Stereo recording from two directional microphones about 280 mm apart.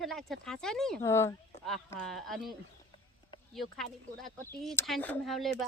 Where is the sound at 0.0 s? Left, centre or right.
Centre.